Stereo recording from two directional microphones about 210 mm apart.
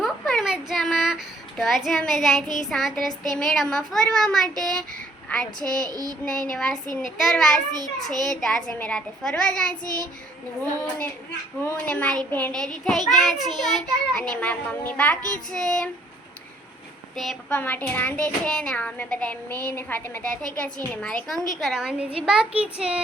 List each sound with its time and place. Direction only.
0.0 s a sound: centre (ahead or behind)
2.6 s a child's voice: centre (ahead or behind)
5.9 s child singing: 15° right (ahead or behind)
6.2 s a child's voice: 5° left (ahead or behind)
7.7 s a child's voice: 20° right (ahead or behind)
8.4 s a child's voice: 5° left (ahead or behind)
17.2 s a child's voice: 5° left (ahead or behind)